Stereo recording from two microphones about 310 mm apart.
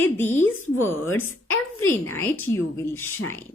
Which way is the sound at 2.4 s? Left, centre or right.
Centre.